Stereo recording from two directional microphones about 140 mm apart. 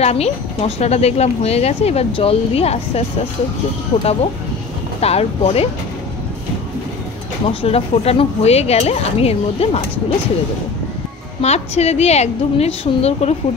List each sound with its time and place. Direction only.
0.0 s a woman's voice: 45° left (ahead or behind)
4.0 s a woman's voice: 45° left (ahead or behind)
7.4 s a woman's voice: 45° left (ahead or behind)
11.4 s a woman's voice: 50° left (ahead or behind)